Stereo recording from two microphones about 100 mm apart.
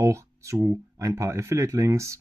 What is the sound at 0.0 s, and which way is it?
Speech, 30° right (ahead or behind).